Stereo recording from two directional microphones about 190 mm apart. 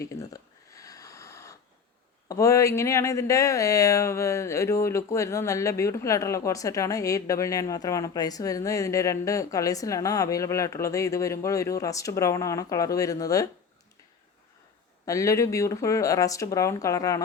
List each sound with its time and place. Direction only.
0.7 s a sound: 20° left (ahead or behind)
2.3 s speech: 15° left (ahead or behind)
15.0 s speech: 15° left (ahead or behind)